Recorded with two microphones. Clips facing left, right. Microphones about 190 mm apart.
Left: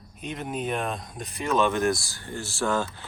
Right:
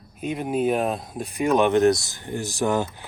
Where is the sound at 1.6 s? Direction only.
20° right (ahead or behind).